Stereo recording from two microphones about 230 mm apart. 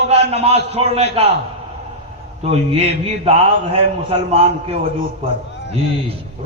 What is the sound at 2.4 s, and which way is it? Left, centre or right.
A man's voice, right.